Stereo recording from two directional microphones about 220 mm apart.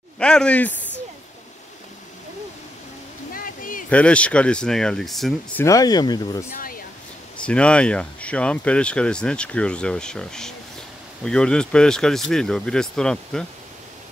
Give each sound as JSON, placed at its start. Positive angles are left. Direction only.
{"t": 0.2, "sound": "speech", "side_deg": 5}
{"t": 3.3, "sound": "a sound", "side_deg": 40}
{"t": 3.9, "sound": "speech", "side_deg": 5}
{"t": 6.5, "sound": "speech", "side_deg": 40}
{"t": 7.3, "sound": "speech", "side_deg": 5}